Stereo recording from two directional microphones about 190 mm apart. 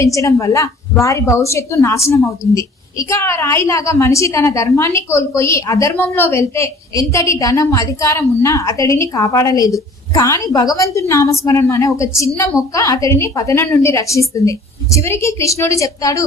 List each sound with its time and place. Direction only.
0.0 s a woman's voice: 15° left (ahead or behind)